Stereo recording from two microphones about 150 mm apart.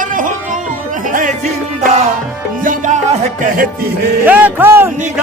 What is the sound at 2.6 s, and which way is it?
Music, 60° right (ahead or behind).